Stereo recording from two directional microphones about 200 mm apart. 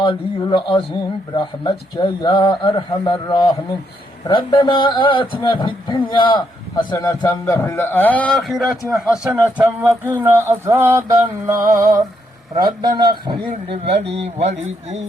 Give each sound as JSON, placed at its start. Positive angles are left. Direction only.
{"t": 0.0, "sound": "a man's voice", "side_deg": 25}
{"t": 14.3, "sound": "a man's voice", "side_deg": -35}